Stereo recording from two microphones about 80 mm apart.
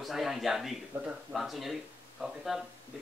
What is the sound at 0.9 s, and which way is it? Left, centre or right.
Speech, right.